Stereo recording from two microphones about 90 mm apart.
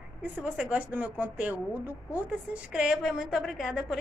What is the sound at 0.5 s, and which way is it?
A woman's voice, 15° right (ahead or behind).